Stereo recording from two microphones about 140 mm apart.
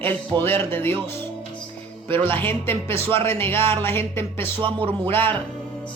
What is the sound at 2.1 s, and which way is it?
Speech, 15° left (ahead or behind).